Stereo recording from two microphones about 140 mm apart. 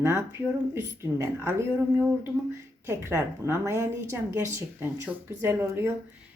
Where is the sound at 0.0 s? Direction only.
15° right (ahead or behind).